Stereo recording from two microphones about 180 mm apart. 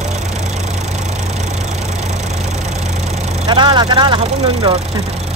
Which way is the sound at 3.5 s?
25° right (ahead or behind).